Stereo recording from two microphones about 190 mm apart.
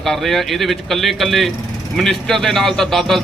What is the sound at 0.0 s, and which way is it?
A man's voice, centre (ahead or behind).